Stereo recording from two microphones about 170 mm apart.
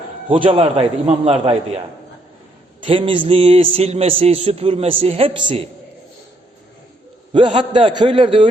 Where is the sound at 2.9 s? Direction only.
30° right (ahead or behind).